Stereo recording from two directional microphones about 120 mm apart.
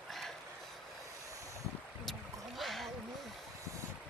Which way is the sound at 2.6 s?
Centre (ahead or behind).